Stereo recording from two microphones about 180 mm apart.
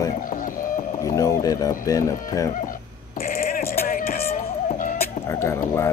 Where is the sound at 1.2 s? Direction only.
20° left (ahead or behind).